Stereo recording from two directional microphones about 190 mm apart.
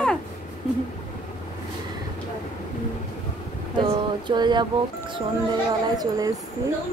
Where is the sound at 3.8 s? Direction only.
25° right (ahead or behind).